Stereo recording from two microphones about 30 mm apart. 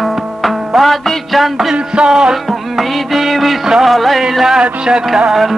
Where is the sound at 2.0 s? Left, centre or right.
Right.